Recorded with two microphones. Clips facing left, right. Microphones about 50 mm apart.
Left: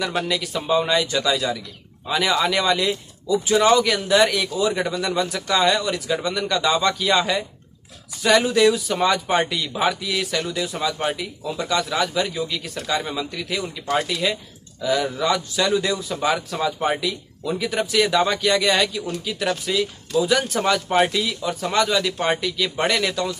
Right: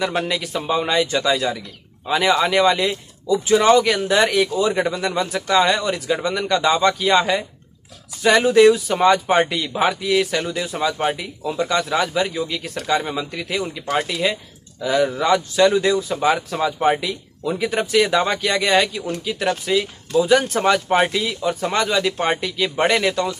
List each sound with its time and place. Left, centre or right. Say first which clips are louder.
0.6 s a man's voice: even; centre
17.5 s a man's voice: right 3 dB; right